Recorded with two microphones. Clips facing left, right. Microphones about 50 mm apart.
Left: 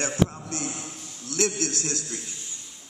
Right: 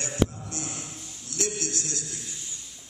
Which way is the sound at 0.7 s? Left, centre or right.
Left.